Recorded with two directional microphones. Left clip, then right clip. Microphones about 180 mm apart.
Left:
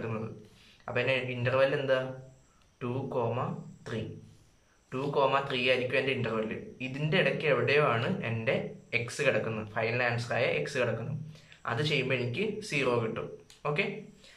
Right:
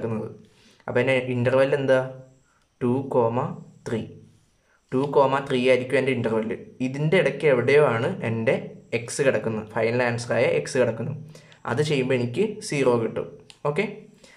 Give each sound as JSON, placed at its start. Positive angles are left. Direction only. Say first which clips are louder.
{"t": 0.8, "sound": "a man's voice", "louder": "right 8 dB", "side_deg": -45}